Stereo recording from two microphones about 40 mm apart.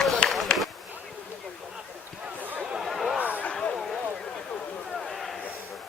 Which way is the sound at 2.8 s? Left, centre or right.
Centre.